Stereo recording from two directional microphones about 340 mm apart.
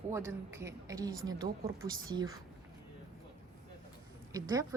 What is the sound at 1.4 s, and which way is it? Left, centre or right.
Speech, right.